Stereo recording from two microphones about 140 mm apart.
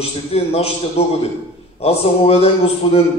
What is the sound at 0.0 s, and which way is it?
A man's voice, 45° left (ahead or behind).